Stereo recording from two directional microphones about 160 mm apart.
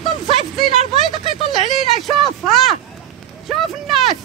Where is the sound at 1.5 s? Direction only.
Centre (ahead or behind).